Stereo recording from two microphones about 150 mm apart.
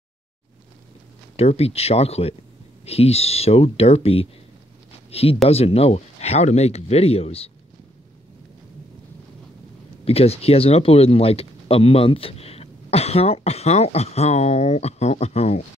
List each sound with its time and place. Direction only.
1.3 s speech: 45° left (ahead or behind)
10.0 s speech: 40° left (ahead or behind)